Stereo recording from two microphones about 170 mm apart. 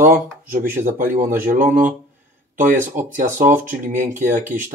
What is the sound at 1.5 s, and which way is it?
Speech, 50° right (ahead or behind).